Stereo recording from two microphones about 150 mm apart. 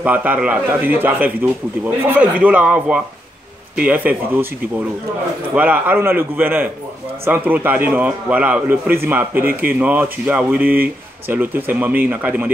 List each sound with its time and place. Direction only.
0.0 s speech: 10° right (ahead or behind)
5.5 s speech: 10° right (ahead or behind)